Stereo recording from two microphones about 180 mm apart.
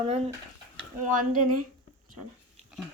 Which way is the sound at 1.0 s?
45° right (ahead or behind).